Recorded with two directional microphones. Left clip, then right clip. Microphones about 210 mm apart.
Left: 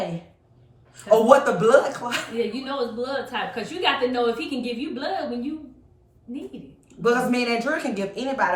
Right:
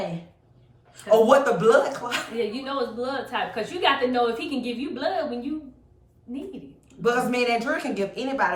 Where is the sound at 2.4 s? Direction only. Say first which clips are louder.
Left 1 dB; 20° right (ahead or behind).